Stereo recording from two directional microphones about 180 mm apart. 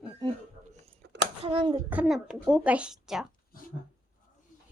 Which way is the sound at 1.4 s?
30° right (ahead or behind).